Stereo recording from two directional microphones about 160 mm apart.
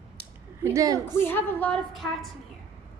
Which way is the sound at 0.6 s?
20° right (ahead or behind).